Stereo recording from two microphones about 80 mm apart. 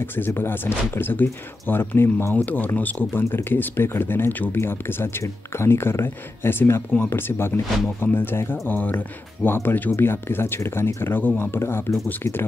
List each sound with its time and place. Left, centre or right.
0.0 s speech: left